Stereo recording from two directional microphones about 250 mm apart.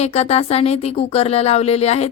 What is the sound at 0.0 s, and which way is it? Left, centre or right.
Speech, left.